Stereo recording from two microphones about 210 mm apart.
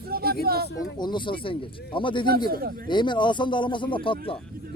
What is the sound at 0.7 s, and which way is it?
Speech, 20° left (ahead or behind).